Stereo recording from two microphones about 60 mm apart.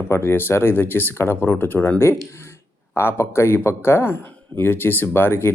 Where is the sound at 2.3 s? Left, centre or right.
Left.